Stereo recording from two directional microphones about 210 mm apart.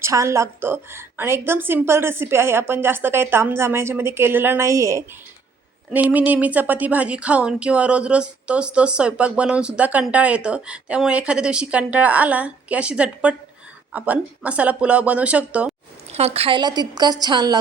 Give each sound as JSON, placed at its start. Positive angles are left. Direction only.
{"t": 0.0, "sound": "a woman's voice", "side_deg": -15}
{"t": 16.1, "sound": "a woman's voice", "side_deg": -30}